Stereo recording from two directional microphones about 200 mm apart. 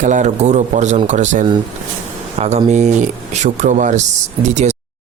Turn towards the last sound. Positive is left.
turn(degrees=-35)  # may be behind; listen again after turning